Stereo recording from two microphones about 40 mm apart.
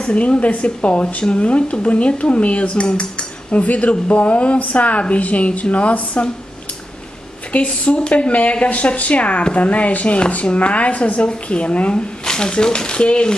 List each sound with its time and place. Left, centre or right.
0.0 s speech: left
3.6 s speech: left
7.5 s speech: left